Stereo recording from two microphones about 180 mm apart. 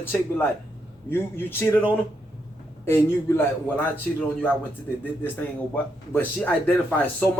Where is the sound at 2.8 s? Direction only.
15° left (ahead or behind).